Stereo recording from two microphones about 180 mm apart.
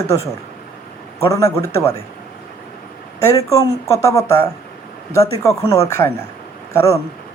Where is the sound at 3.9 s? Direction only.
15° left (ahead or behind).